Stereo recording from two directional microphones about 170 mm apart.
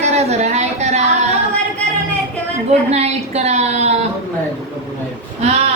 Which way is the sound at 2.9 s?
40° right (ahead or behind).